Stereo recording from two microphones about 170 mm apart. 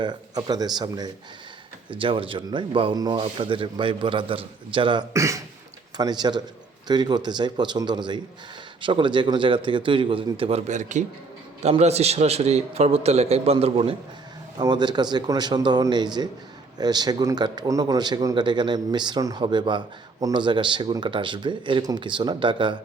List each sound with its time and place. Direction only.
0.0 s speech: 25° right (ahead or behind)
10.7 s a man's voice: 45° right (ahead or behind)
14.6 s speech: 25° right (ahead or behind)